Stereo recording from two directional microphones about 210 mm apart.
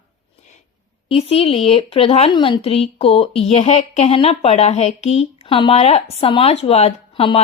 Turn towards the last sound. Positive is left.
turn(degrees=25)  # may be behind; listen again after turning